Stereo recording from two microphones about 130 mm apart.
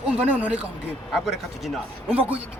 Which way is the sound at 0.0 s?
10° right (ahead or behind).